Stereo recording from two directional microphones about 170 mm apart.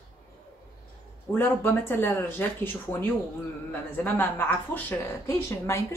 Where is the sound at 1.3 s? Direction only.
10° left (ahead or behind).